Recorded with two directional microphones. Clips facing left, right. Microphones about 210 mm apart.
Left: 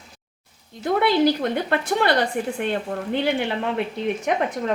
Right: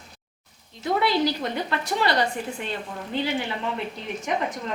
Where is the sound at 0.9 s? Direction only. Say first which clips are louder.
Left 4 dB; 55° left (ahead or behind).